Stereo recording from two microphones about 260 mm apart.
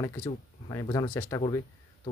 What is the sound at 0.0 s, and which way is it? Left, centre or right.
Speech, centre.